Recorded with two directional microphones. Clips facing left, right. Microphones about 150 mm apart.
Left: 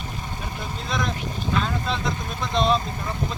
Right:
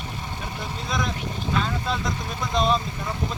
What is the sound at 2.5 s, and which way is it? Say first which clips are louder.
Speech: left 1 dB; centre (ahead or behind).